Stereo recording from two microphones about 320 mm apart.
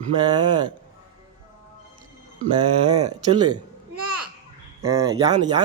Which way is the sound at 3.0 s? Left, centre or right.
Right.